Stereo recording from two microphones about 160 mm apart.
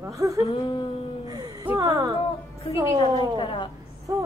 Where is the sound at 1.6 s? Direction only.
20° right (ahead or behind).